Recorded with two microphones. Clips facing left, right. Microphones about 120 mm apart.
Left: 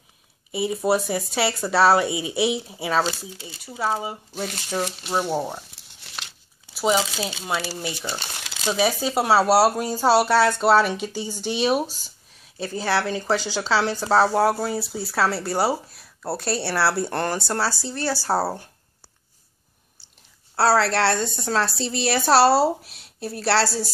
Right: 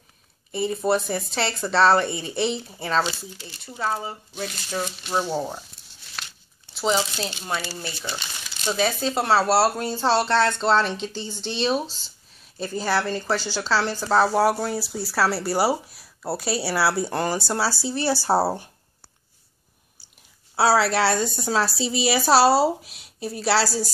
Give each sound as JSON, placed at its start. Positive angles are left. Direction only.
{"t": 0.5, "sound": "speech", "side_deg": 5}
{"t": 5.8, "sound": "a sound", "side_deg": 90}
{"t": 6.7, "sound": "speech", "side_deg": 10}
{"t": 20.5, "sound": "speech", "side_deg": -5}